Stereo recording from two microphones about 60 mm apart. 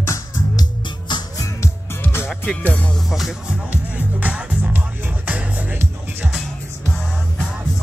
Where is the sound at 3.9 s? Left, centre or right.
Right.